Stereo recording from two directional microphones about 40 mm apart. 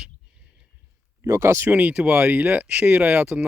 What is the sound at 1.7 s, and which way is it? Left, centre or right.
Speech, right.